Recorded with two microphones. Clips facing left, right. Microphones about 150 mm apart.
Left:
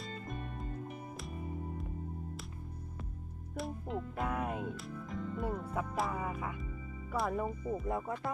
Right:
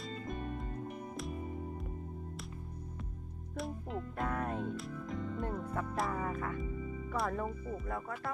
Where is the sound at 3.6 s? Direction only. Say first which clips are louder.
Left 1 dB; centre (ahead or behind); by 8.2 s 20° left (ahead or behind).